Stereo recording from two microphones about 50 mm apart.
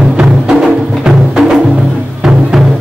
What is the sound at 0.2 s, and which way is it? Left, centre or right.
Music, centre.